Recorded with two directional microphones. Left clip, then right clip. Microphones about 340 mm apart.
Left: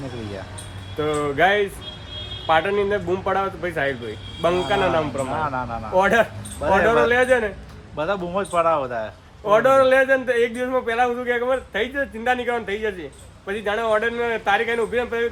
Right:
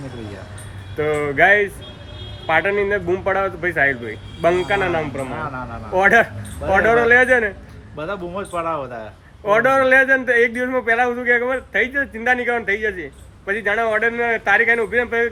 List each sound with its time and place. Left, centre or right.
0.9 s a man's voice: centre
7.9 s a man's voice: centre
9.5 s speech: centre